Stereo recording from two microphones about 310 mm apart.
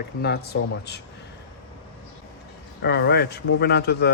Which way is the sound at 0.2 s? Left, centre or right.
Left.